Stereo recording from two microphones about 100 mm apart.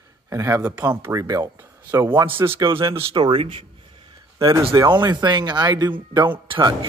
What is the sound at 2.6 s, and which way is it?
Speech, 55° right (ahead or behind).